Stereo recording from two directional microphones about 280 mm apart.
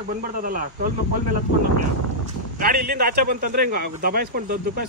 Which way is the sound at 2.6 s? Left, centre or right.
Right.